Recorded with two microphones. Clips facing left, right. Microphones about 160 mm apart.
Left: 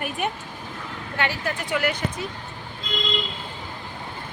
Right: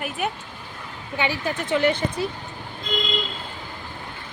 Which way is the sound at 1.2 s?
15° right (ahead or behind).